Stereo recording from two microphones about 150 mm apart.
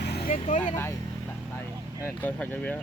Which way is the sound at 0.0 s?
90° left.